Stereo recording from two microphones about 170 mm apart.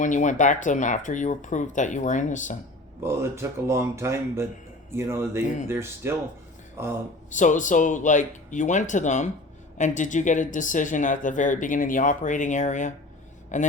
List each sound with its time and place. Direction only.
0.0 s speech: 45° left (ahead or behind)
3.0 s speech: 15° right (ahead or behind)
7.3 s speech: 45° left (ahead or behind)